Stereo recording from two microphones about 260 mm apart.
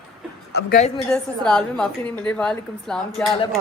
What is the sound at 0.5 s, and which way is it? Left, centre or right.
Speech, left.